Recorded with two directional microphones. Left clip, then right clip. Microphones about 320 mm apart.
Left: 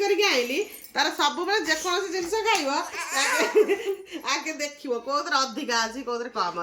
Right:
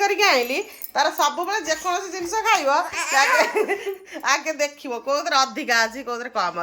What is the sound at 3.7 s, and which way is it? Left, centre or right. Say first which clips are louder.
A woman's voice: even; centre.